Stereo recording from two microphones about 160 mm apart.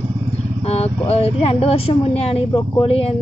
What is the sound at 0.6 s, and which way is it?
Speech, 40° left (ahead or behind).